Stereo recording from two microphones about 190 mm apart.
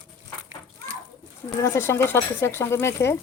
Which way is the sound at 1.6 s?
15° left (ahead or behind).